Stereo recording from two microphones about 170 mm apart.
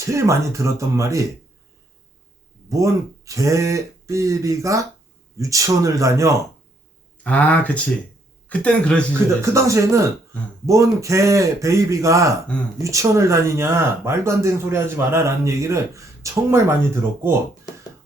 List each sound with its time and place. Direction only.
0.1 s speech: 15° right (ahead or behind)
2.6 s speech: 20° right (ahead or behind)
7.3 s speech: 10° left (ahead or behind)
9.4 s speech: 15° right (ahead or behind)